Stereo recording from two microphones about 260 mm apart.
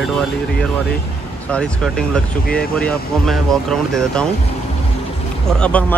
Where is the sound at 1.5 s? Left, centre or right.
Centre.